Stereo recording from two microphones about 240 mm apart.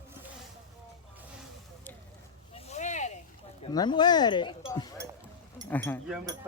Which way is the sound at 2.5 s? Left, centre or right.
Left.